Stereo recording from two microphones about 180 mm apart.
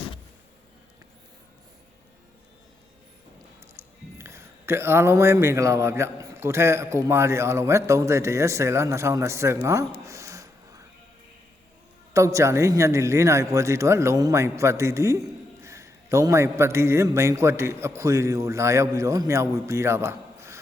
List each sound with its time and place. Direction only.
4.2 s speech: 15° right (ahead or behind)
10.0 s a sound: 15° right (ahead or behind)
12.1 s speech: 15° right (ahead or behind)